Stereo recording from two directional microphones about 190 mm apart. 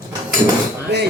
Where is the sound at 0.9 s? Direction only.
60° right (ahead or behind).